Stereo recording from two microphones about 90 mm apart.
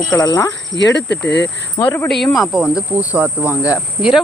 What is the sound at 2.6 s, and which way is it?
Speech, 15° right (ahead or behind).